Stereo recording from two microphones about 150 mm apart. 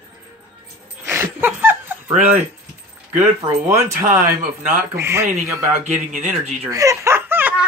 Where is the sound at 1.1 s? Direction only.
15° right (ahead or behind).